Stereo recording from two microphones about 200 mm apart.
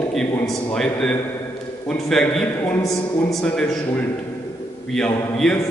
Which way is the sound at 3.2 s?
Centre (ahead or behind).